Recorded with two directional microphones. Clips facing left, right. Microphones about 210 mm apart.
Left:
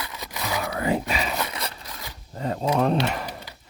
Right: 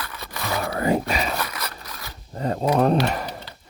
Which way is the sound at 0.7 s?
45° right (ahead or behind).